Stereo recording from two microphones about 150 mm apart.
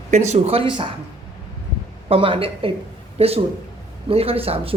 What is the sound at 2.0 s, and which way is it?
A woman's voice, 35° right (ahead or behind).